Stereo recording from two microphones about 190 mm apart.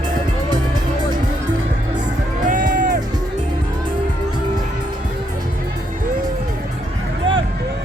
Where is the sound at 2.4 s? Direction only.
45° right (ahead or behind).